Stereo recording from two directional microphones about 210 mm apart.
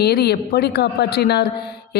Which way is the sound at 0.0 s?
50° left (ahead or behind).